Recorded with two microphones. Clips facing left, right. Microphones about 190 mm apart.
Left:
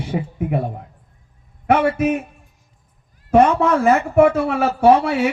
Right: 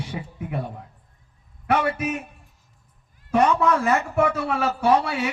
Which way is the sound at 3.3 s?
50° left (ahead or behind).